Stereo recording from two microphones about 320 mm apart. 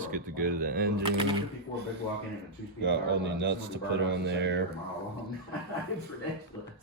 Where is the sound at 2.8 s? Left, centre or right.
Right.